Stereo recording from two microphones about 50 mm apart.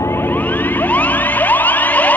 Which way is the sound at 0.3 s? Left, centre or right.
Left.